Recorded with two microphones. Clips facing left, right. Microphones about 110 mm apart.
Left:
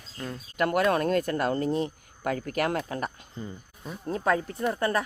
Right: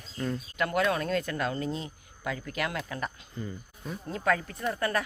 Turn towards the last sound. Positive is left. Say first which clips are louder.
# left 3 dB
turn(degrees=25)  # may be behind; listen again after turning